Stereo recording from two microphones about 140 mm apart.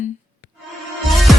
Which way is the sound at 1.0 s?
Centre (ahead or behind).